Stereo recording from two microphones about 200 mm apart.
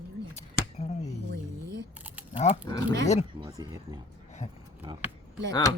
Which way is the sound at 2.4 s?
30° left (ahead or behind).